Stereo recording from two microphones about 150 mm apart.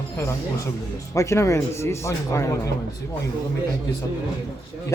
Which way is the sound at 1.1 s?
20° left (ahead or behind).